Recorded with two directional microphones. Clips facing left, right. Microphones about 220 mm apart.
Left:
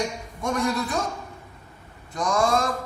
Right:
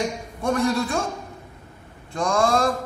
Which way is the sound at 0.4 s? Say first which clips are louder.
Right 3 dB; 30° right (ahead or behind).